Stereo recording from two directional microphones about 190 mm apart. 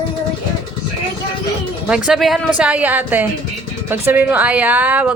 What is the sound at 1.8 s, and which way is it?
A woman's voice, 5° right (ahead or behind).